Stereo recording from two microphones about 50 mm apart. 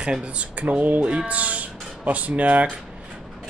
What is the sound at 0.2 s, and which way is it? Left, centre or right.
Speech, right.